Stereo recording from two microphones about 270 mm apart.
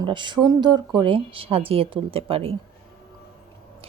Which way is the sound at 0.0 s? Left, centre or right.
Centre.